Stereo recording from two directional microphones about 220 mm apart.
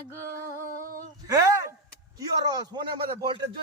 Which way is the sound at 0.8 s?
40° right (ahead or behind).